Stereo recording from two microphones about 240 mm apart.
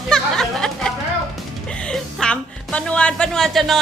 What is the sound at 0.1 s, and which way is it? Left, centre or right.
Music, centre.